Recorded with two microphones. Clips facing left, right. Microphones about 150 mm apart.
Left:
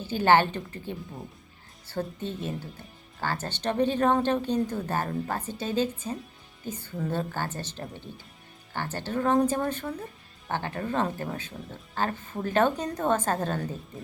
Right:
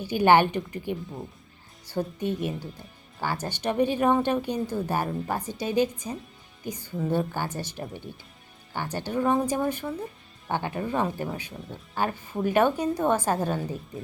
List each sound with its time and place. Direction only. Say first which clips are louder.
0.0 s speech: right 2 dB; 15° right (ahead or behind)